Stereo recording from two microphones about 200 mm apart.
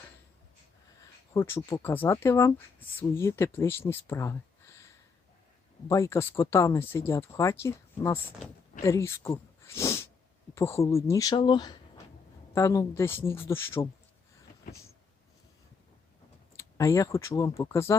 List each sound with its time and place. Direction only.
1.3 s speech: 15° left (ahead or behind)
5.9 s speech: 15° left (ahead or behind)
9.6 s sneeze: 15° left (ahead or behind)
10.5 s speech: 15° left (ahead or behind)
16.6 s speech: 15° left (ahead or behind)